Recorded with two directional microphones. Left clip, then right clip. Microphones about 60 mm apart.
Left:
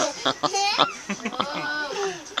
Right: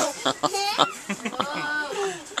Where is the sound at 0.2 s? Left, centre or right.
Centre.